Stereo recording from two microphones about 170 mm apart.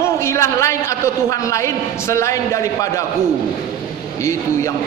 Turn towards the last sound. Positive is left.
turn(degrees=15)  # may be behind; listen again after turning